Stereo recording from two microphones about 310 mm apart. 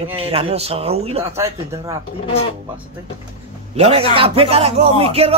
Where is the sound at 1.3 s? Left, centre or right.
Centre.